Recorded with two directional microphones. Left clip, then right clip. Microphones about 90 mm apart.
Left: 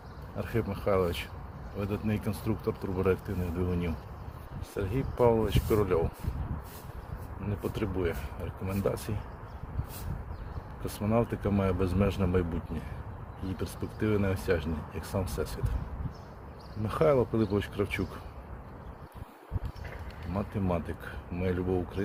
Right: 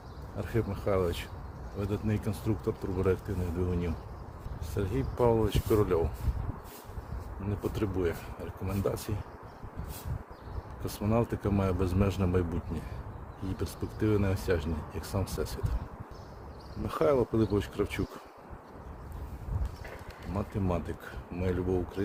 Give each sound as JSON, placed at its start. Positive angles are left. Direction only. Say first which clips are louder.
{"t": 0.3, "sound": "speech", "louder": "even", "side_deg": -10}
{"t": 4.7, "sound": "speech", "louder": "even", "side_deg": -30}
{"t": 7.4, "sound": "speech", "louder": "right 1 dB", "side_deg": -40}
{"t": 10.8, "sound": "speech", "louder": "left 1 dB", "side_deg": -35}
{"t": 16.8, "sound": "speech", "louder": "left 1 dB", "side_deg": -30}
{"t": 20.3, "sound": "speech", "louder": "left 1 dB", "side_deg": -30}